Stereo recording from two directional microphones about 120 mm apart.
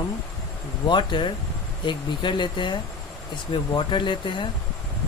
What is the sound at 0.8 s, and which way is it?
Speech, 40° left (ahead or behind).